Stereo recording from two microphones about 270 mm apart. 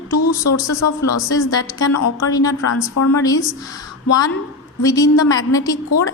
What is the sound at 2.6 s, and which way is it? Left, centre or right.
Speech, left.